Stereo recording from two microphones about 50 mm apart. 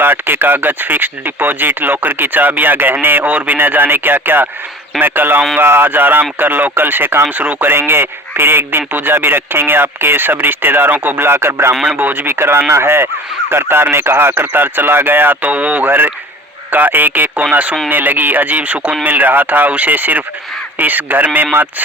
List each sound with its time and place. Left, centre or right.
0.0 s speech: right
11.3 s speech: right
11.7 s a man's voice: centre
11.9 s speech: right
12.3 s speech: right
15.4 s speech: right
15.9 s speech: right